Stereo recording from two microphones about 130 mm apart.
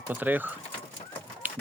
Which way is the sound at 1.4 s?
15° right (ahead or behind).